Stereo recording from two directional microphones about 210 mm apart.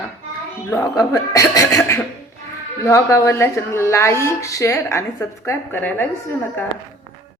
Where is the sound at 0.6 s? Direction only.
15° left (ahead or behind).